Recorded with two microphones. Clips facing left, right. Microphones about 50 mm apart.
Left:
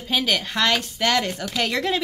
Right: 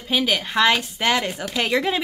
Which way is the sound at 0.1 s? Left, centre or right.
Centre.